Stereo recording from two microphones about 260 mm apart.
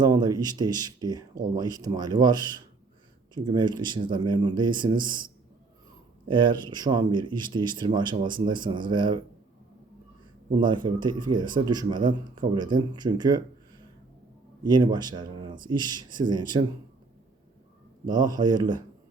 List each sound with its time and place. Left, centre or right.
0.0 s speech: centre
10.6 s speech: centre
14.6 s speech: centre
18.0 s speech: centre